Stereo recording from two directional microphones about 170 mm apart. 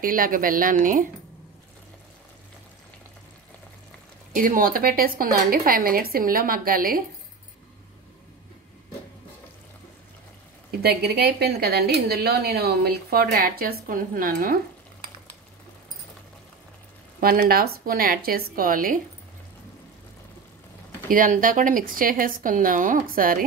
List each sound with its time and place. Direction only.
0.0 s a woman's voice: 55° right (ahead or behind)
4.3 s a woman's voice: 55° right (ahead or behind)
10.8 s speech: 70° right (ahead or behind)
17.2 s a woman's voice: 60° right (ahead or behind)
21.1 s speech: 55° right (ahead or behind)